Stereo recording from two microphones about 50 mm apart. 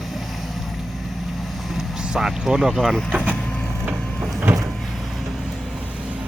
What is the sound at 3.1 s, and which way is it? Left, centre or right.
Vehicle, right.